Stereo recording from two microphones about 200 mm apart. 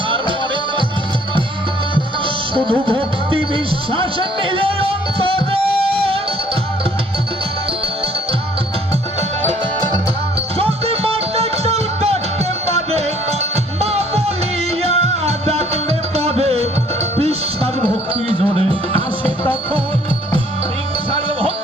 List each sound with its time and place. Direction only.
2.0 s music: 25° right (ahead or behind)
10.6 s music: 30° right (ahead or behind)